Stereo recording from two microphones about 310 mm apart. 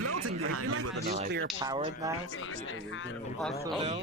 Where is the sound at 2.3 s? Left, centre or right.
Left.